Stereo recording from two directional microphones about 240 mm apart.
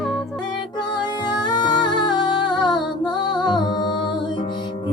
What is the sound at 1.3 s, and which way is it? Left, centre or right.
Music, centre.